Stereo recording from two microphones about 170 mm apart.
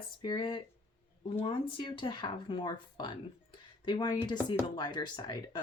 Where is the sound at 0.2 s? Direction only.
30° left (ahead or behind).